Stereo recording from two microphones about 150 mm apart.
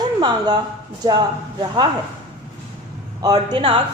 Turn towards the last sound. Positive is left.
turn(degrees=-30)  # may be behind; listen again after turning